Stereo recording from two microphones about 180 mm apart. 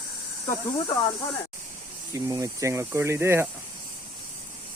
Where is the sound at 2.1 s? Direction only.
20° right (ahead or behind).